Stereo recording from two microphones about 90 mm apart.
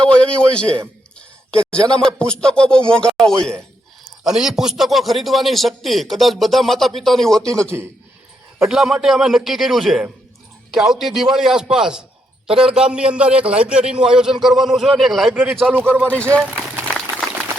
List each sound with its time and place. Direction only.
0.0 s a man's voice: 15° left (ahead or behind)
4.2 s a man's voice: 5° right (ahead or behind)
8.6 s a man's voice: 5° right (ahead or behind)
15.7 s speech: 20° right (ahead or behind)
16.0 s speech: 15° left (ahead or behind)